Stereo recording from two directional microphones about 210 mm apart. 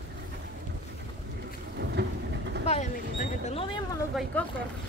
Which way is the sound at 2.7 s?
30° left (ahead or behind).